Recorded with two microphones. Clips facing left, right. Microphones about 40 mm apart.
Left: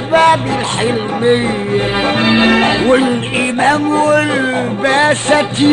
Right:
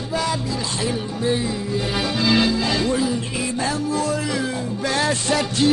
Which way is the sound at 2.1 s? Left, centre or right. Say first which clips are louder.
Left 7 dB; left.